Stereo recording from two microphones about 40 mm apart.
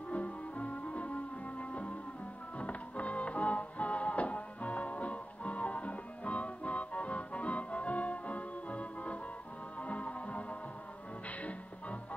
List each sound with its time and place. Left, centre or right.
0.1 s music: left